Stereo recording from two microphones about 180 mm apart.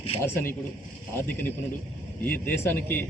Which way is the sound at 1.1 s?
10° left (ahead or behind).